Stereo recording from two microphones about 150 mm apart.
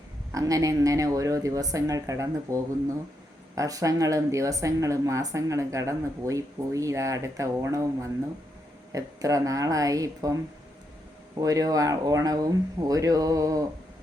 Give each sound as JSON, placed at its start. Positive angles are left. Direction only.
{"t": 0.3, "sound": "speech", "side_deg": -20}
{"t": 11.3, "sound": "speech", "side_deg": -25}